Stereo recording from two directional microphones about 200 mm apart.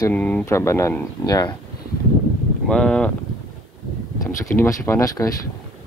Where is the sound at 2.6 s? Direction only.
5° left (ahead or behind).